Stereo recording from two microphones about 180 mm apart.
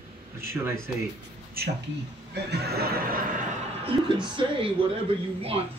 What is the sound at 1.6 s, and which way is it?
Neigh, 60° right (ahead or behind).